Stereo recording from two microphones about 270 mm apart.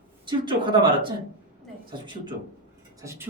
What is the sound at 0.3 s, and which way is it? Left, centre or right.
Speech, centre.